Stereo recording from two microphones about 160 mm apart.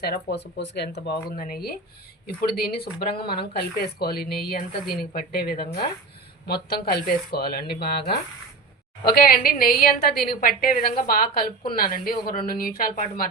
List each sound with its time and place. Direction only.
0.0 s a woman's voice: 85° left
9.0 s a woman's voice: 70° left (ahead or behind)